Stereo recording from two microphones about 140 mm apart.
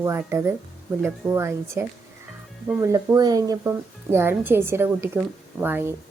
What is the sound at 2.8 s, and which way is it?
A woman's voice, 25° right (ahead or behind).